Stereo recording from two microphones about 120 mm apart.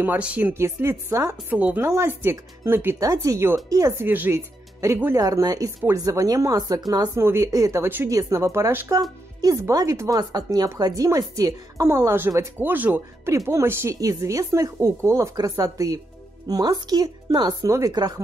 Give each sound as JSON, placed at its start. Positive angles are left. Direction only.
{"t": 0.0, "sound": "speech", "side_deg": -15}
{"t": 1.5, "sound": "speech", "side_deg": -15}
{"t": 4.1, "sound": "a woman's voice", "side_deg": -15}